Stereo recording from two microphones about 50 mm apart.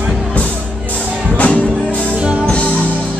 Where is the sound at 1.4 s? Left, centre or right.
Left.